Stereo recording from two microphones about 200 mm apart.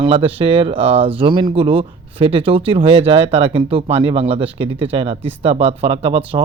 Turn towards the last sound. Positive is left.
turn(degrees=-30)  # may be behind; listen again after turning